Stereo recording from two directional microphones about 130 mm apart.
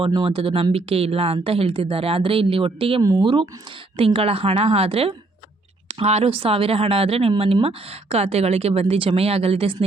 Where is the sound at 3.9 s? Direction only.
45° right (ahead or behind).